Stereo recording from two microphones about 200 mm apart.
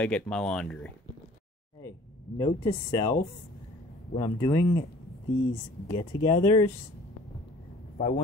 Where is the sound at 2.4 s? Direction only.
20° left (ahead or behind).